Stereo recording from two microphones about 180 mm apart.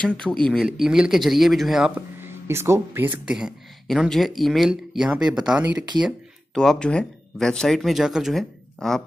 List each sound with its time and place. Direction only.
0.2 s speech: 5° left (ahead or behind)